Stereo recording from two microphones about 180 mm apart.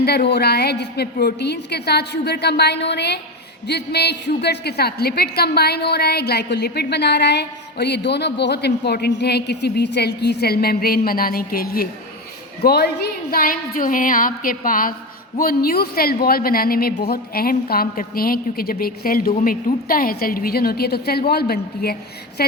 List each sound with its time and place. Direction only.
0.0 s a woman's voice: 65° left (ahead or behind)